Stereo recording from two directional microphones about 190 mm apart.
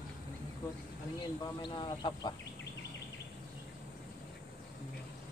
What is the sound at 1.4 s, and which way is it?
Speech, 25° left (ahead or behind).